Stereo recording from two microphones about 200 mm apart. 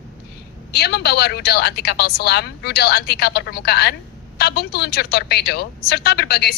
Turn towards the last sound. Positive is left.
turn(degrees=50)  # may be behind; listen again after turning